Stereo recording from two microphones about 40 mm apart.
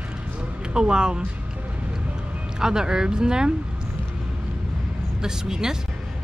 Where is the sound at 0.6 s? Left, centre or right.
Centre.